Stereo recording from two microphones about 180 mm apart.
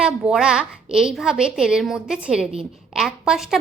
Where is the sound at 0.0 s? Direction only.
5° right (ahead or behind).